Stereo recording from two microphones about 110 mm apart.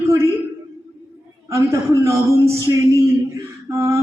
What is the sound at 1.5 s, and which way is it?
A man's voice, 30° right (ahead or behind).